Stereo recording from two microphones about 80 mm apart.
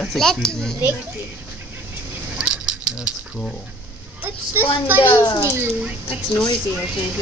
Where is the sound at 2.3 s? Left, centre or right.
Centre.